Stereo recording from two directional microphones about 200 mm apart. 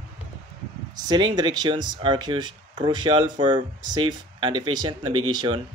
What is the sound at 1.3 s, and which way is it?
Speech, 20° right (ahead or behind).